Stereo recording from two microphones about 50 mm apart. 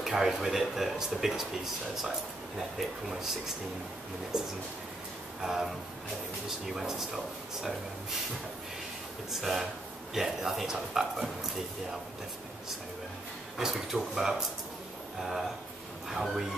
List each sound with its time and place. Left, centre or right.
0.0 s speech: centre
5.4 s speech: centre
6.7 s speech: centre
9.3 s a man's voice: centre
13.6 s speech: centre
16.1 s speech: centre